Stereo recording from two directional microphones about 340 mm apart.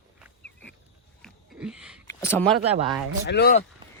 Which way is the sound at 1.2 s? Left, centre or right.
Centre.